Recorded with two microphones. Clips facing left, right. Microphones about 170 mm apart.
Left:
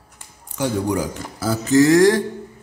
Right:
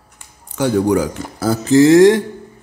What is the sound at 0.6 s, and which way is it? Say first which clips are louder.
Speech: right 6 dB; 75° right (ahead or behind).